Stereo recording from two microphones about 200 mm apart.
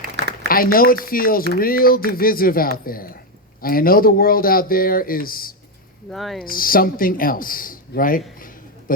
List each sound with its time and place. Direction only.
0.4 s a woman's voice: 45° left (ahead or behind)
6.1 s speech: centre (ahead or behind)
6.4 s speech: 45° left (ahead or behind)